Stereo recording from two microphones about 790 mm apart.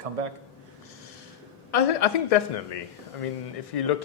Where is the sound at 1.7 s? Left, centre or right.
Left.